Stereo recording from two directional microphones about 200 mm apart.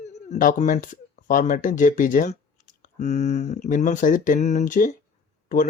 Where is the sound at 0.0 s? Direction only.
35° left (ahead or behind).